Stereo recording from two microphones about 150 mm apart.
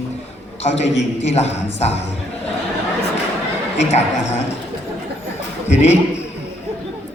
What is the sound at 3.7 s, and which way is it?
Speech, 50° left (ahead or behind).